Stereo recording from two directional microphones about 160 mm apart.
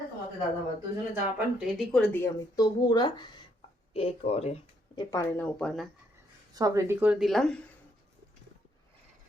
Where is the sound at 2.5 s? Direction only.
25° left (ahead or behind).